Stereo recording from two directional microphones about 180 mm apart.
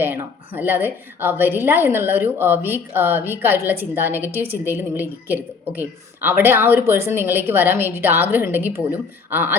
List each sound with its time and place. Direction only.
0.0 s a woman's voice: 10° right (ahead or behind)